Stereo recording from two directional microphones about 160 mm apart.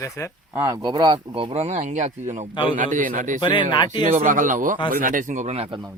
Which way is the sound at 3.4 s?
30° left (ahead or behind).